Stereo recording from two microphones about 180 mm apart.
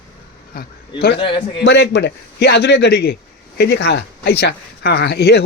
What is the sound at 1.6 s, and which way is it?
Speech, 70° left (ahead or behind).